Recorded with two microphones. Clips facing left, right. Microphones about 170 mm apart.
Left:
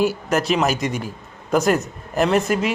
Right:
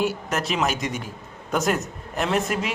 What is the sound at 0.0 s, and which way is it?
A man's voice, centre (ahead or behind).